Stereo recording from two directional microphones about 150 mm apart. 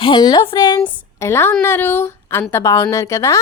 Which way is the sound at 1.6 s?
15° left (ahead or behind).